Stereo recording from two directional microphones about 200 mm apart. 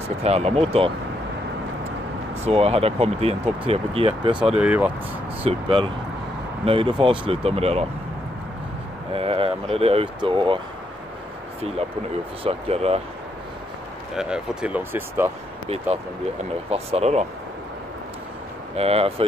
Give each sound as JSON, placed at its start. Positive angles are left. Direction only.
{"t": 0.2, "sound": "speech", "side_deg": -30}
{"t": 2.4, "sound": "speech", "side_deg": -30}
{"t": 4.6, "sound": "speech", "side_deg": -5}
{"t": 5.4, "sound": "speech", "side_deg": -30}
{"t": 9.1, "sound": "speech", "side_deg": -30}
{"t": 12.4, "sound": "speech", "side_deg": -30}
{"t": 14.1, "sound": "speech", "side_deg": -5}
{"t": 16.7, "sound": "speech", "side_deg": -30}
{"t": 18.8, "sound": "speech", "side_deg": -30}